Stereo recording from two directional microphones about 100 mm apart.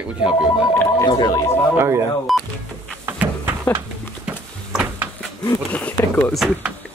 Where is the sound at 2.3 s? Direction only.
Centre (ahead or behind).